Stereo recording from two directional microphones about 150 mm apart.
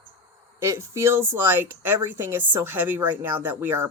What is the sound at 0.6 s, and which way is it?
Speech, 20° right (ahead or behind).